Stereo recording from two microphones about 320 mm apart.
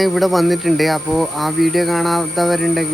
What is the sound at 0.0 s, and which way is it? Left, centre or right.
Speech, centre.